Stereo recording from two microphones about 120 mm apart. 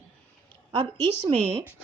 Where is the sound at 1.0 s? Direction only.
40° right (ahead or behind).